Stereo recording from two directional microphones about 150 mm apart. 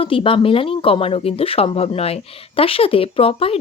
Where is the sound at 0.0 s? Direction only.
35° left (ahead or behind).